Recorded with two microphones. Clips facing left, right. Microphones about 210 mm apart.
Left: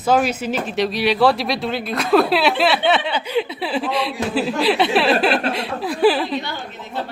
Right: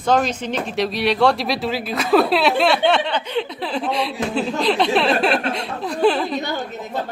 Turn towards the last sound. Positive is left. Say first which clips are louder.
# right 3 dB
turn(degrees=-45)  # may be behind; listen again after turning